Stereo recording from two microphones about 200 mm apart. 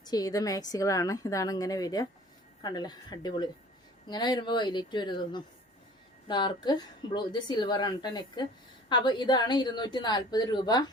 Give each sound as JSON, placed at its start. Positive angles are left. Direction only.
{"t": 0.0, "sound": "a woman's voice", "side_deg": 20}